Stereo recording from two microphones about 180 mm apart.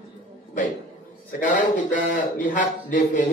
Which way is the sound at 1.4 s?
45° left (ahead or behind).